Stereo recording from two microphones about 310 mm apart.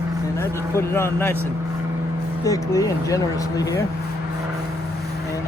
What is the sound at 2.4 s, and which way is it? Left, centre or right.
Speech, centre.